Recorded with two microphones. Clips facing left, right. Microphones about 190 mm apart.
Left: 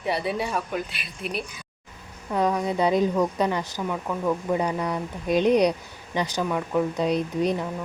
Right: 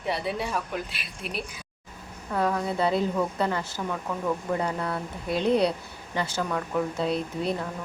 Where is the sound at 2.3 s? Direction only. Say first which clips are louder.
Left 3 dB; 15° left (ahead or behind).